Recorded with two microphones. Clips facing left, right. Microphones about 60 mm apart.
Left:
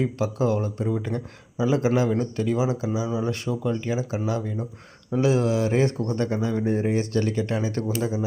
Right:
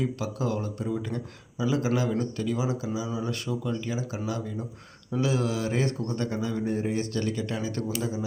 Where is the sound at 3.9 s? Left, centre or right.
Left.